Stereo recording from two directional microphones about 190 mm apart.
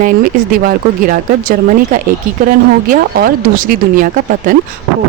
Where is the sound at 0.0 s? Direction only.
45° right (ahead or behind).